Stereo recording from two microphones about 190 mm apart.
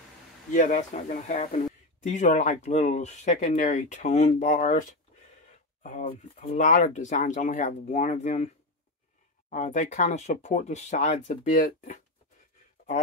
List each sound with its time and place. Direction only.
0.5 s speech: 40° left (ahead or behind)
9.5 s speech: 40° left (ahead or behind)